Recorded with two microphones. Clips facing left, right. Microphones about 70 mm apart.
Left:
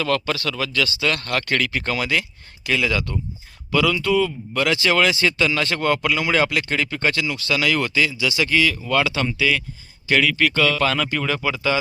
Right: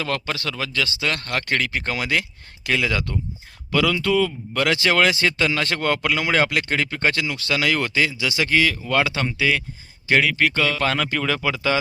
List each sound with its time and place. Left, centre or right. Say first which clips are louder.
0.0 s speech: left 4 dB; right
2.6 s speech: left 1 dB; right
11.1 s speech: even; right